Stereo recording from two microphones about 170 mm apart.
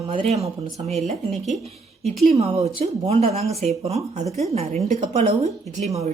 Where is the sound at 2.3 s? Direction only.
35° right (ahead or behind).